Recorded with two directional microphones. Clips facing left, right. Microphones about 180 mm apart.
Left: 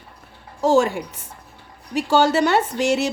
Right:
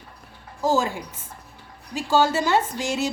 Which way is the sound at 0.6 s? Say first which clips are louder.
Left 5 dB; 70° left (ahead or behind).